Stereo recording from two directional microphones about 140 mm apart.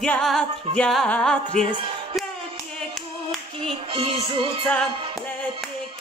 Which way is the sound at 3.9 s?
40° right (ahead or behind).